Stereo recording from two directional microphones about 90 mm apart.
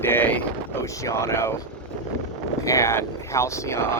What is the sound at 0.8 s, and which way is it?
Speech, 35° left (ahead or behind).